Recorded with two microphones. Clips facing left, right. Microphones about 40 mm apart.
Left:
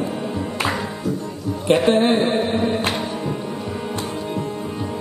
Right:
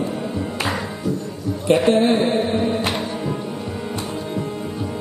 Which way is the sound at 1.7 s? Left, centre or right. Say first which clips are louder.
Even; left.